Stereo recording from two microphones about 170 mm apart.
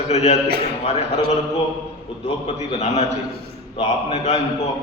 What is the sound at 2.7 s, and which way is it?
A man's voice, 40° left (ahead or behind).